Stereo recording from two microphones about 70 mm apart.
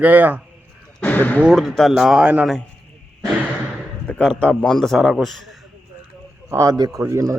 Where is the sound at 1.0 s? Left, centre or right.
Left.